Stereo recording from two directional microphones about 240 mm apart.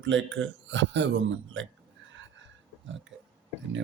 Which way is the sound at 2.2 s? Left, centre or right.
Right.